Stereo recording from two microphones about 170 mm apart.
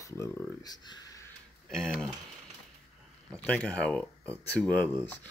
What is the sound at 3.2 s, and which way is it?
Speech, 5° left (ahead or behind).